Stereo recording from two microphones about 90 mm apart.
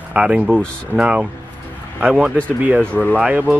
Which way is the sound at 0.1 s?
15° right (ahead or behind).